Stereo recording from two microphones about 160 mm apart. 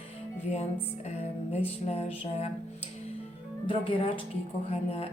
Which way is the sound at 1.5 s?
40° left (ahead or behind).